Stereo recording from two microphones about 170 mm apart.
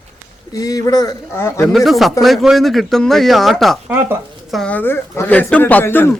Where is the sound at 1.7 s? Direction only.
Centre (ahead or behind).